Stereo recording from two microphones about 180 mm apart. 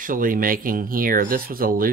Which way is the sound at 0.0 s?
50° right (ahead or behind).